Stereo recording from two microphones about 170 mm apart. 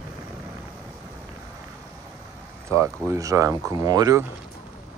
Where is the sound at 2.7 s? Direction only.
15° right (ahead or behind).